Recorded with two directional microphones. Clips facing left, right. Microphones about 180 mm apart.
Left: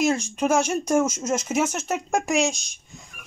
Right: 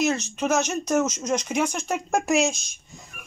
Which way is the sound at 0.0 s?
10° left (ahead or behind).